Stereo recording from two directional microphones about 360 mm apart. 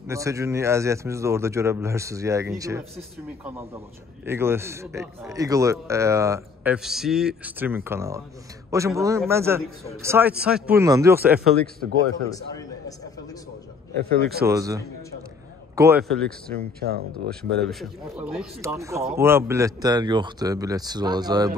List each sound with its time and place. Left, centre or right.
0.0 s speech: centre
4.3 s a man's voice: centre
11.6 s a man's voice: centre
14.0 s speech: right
14.4 s a man's voice: centre
16.3 s speech: right
17.6 s speech: centre